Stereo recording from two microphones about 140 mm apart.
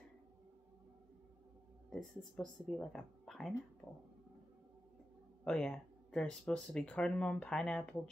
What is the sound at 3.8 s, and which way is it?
Speech, 15° left (ahead or behind).